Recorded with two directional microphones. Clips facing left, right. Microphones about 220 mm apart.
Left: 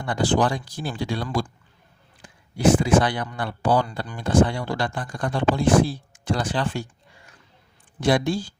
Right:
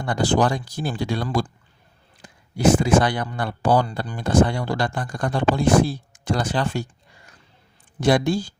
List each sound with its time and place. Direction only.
0.0 s speech: 40° right (ahead or behind)
8.0 s speech: 45° right (ahead or behind)